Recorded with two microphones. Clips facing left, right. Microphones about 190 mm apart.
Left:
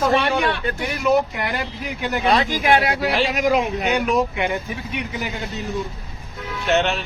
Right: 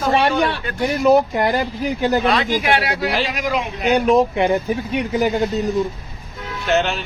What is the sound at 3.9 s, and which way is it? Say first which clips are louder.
Speech: right 7 dB; 35° right (ahead or behind).